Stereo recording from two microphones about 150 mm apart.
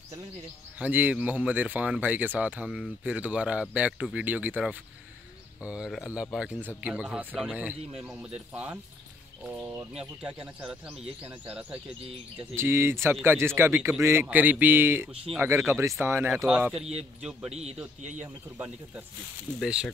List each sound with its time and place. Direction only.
0.7 s speech: 10° right (ahead or behind)
9.8 s speech: 5° right (ahead or behind)
16.7 s speech: 45° right (ahead or behind)
18.2 s speech: 15° right (ahead or behind)